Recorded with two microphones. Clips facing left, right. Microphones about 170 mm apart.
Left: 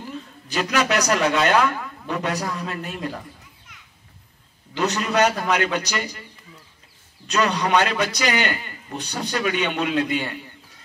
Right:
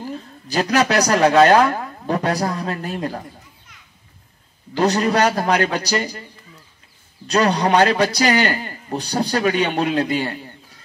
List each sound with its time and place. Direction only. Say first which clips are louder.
0.0 s speech: right 4 dB; 35° right (ahead or behind)
4.7 s a man's voice: right 4 dB; 35° right (ahead or behind)
7.2 s a man's voice: right 4 dB; 35° right (ahead or behind)